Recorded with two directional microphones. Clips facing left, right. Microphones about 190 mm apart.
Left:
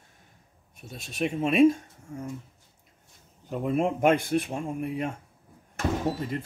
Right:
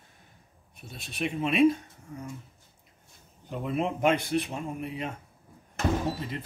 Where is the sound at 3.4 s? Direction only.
45° left (ahead or behind).